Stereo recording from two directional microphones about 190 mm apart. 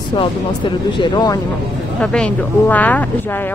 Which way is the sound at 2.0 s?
5° left (ahead or behind).